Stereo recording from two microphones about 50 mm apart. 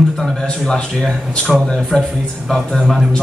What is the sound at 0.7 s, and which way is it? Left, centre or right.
Speech, centre.